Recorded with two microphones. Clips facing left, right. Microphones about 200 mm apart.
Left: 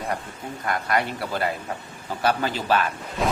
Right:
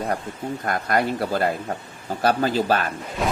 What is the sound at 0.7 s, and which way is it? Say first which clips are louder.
Speech: right 2 dB; 40° right (ahead or behind).